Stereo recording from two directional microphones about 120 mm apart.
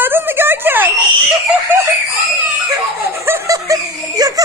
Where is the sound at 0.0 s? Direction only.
15° right (ahead or behind).